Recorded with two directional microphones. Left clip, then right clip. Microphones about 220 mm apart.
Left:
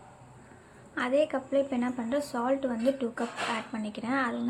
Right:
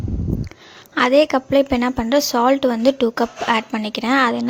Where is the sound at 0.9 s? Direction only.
50° right (ahead or behind).